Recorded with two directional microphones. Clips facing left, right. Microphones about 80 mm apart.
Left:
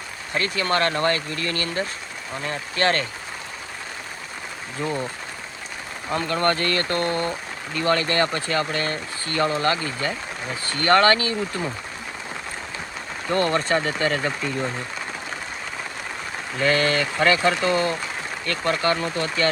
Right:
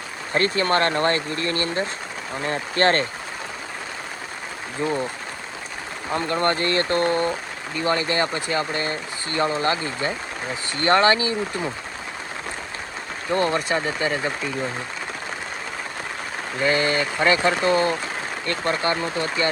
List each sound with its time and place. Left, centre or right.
0.3 s speech: right
4.8 s speech: centre
6.1 s speech: right
13.3 s speech: centre
16.6 s speech: right